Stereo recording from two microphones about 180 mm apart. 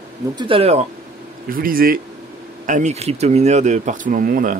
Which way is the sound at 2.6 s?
45° right (ahead or behind).